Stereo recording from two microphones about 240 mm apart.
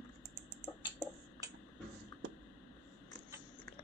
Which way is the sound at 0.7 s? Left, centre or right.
Left.